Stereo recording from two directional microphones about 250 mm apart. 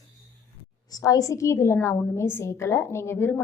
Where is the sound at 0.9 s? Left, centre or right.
Centre.